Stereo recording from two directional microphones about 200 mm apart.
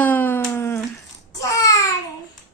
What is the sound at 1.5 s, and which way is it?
Babbling, 15° left (ahead or behind).